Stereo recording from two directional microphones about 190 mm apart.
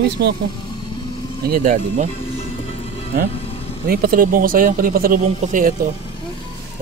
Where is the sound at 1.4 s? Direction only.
45° right (ahead or behind).